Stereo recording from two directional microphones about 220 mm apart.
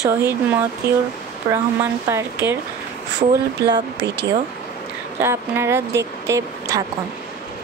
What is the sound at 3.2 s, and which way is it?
Speech, 25° right (ahead or behind).